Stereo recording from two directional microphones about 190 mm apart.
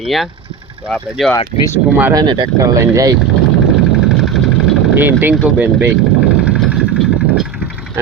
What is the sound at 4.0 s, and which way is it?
Vehicle, centre (ahead or behind).